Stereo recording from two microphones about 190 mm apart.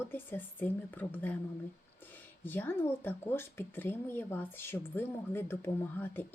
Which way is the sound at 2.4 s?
10° left (ahead or behind).